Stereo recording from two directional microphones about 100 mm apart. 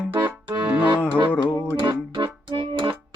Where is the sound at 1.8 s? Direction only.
50° right (ahead or behind).